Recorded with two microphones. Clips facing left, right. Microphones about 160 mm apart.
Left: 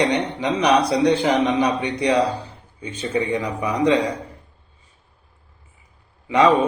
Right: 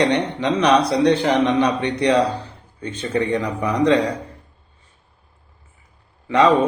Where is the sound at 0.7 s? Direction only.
30° right (ahead or behind).